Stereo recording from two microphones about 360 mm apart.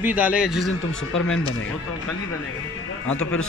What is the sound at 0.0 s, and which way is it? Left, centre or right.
Speech, centre.